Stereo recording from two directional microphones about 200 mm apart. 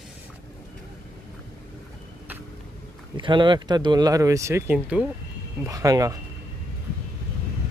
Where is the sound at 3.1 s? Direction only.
25° right (ahead or behind).